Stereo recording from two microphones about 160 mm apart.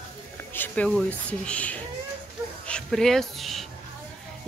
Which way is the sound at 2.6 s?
5° left (ahead or behind).